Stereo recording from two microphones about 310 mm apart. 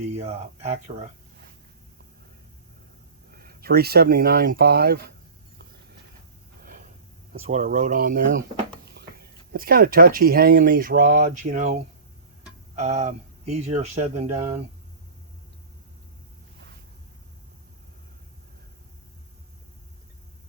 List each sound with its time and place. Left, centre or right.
0.2 s speech: centre
3.3 s speech: right
6.6 s snort: right
7.3 s speech: right